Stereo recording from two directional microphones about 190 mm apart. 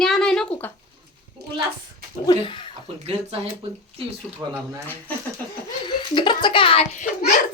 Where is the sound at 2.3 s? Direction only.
25° left (ahead or behind).